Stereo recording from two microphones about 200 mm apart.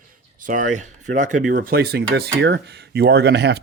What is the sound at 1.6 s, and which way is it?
Speech, 50° right (ahead or behind).